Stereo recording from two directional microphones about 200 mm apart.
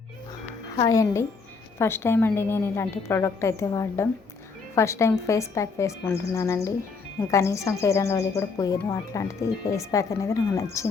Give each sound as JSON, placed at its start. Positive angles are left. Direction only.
{"t": 0.8, "sound": "a woman's voice", "side_deg": 15}